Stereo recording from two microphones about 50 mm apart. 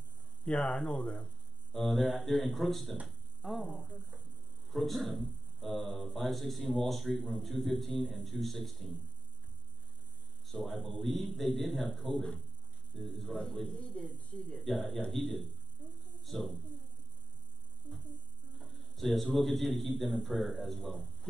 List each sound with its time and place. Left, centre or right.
0.5 s speech: left
1.7 s speech: centre
3.1 s a sound: centre
4.6 s speech: centre
10.4 s speech: centre
13.9 s speech: left
14.5 s speech: centre
18.6 s a man's voice: centre